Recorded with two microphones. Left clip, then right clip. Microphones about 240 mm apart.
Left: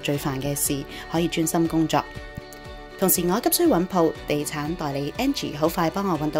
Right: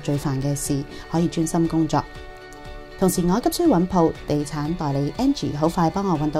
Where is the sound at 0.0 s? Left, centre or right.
Right.